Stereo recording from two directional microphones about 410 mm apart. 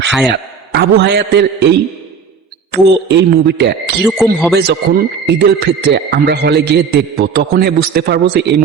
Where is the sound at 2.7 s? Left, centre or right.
Right.